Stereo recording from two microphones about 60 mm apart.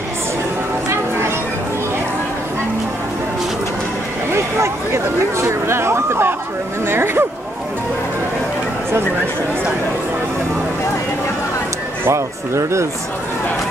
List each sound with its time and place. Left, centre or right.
4.3 s a sound: right
6.9 s speech: right
12.1 s speech: right